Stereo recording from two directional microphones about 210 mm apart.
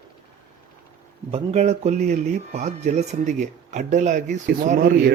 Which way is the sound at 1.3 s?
30° right (ahead or behind).